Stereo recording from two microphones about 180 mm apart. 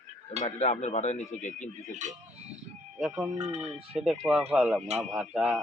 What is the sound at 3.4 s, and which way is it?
Speech, 40° right (ahead or behind).